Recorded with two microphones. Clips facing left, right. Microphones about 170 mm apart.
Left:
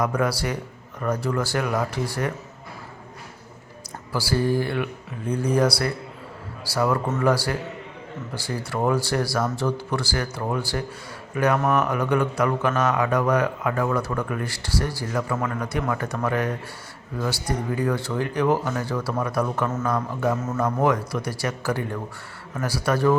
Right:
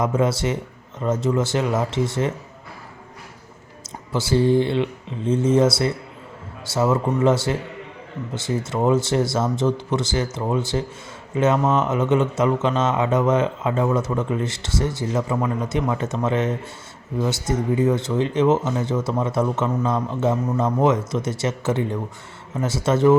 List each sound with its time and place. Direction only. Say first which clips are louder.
0.0 s speech: right 3 dB; 25° right (ahead or behind)
4.1 s speech: right 5 dB; 20° right (ahead or behind)